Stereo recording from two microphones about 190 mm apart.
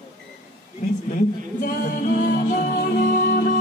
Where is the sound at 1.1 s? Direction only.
50° left (ahead or behind).